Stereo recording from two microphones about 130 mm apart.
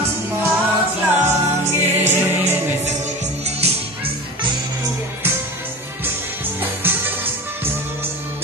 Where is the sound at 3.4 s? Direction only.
50° right (ahead or behind).